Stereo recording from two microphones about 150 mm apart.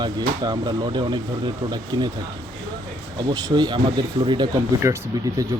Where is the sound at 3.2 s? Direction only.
30° right (ahead or behind).